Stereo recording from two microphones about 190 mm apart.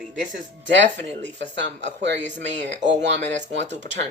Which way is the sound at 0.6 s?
75° right (ahead or behind).